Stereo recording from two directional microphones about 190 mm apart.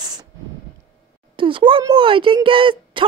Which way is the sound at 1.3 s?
25° right (ahead or behind).